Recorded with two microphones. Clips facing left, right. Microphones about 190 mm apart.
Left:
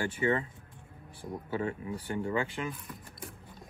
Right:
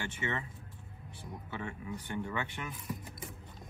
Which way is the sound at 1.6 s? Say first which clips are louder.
Left 6 dB; 30° left (ahead or behind).